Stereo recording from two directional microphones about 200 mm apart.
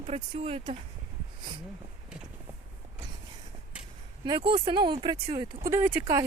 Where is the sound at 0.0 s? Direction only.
30° right (ahead or behind).